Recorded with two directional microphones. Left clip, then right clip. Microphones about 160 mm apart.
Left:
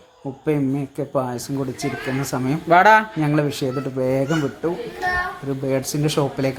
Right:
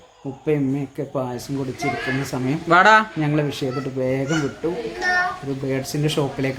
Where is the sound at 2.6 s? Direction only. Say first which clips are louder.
Left 1 dB; 5° left (ahead or behind).